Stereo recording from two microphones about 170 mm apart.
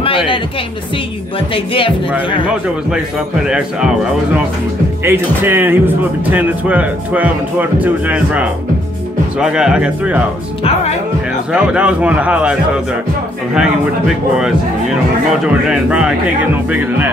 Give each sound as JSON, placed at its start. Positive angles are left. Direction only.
{"t": 1.5, "sound": "speech", "side_deg": 30}
{"t": 3.4, "sound": "speech", "side_deg": -5}
{"t": 10.6, "sound": "speech", "side_deg": 40}
{"t": 11.5, "sound": "speech", "side_deg": -10}
{"t": 13.6, "sound": "speech", "side_deg": -5}